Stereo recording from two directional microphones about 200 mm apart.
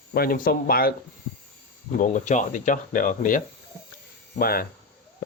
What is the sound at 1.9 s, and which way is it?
Speech, 40° left (ahead or behind).